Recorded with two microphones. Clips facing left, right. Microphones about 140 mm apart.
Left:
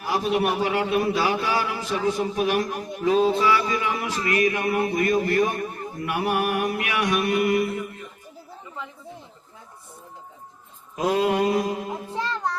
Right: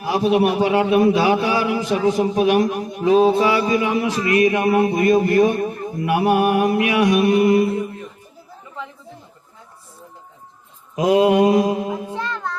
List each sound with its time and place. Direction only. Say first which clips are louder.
0.0 s a man's voice: right 6 dB; 25° right (ahead or behind)
10.9 s mantra: right 7 dB; 15° right (ahead or behind)
12.1 s child singing: right 1 dB; 25° left (ahead or behind)